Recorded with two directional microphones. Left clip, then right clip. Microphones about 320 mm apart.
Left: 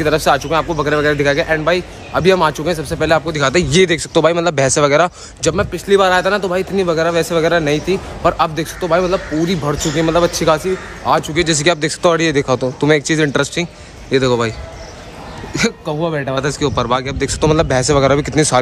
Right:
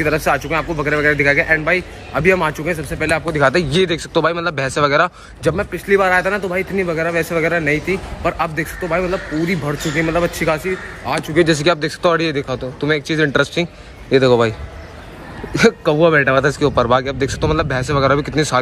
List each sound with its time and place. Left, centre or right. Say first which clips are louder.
0.0 s speech: left 3 dB; centre
15.8 s speech: right 7 dB; centre
16.3 s speech: right 3 dB; centre